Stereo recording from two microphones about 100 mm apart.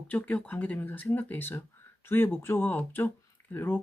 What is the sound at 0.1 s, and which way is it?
Speech, 15° left (ahead or behind).